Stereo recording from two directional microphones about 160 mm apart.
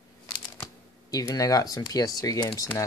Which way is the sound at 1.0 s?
25° left (ahead or behind).